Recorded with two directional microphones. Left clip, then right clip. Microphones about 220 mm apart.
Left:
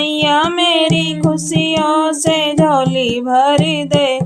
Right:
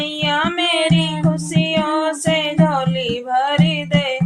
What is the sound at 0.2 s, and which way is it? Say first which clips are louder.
Music: left 5 dB; 50° left (ahead or behind).